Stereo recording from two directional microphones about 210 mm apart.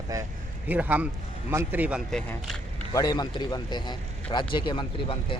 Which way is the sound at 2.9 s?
20° left (ahead or behind).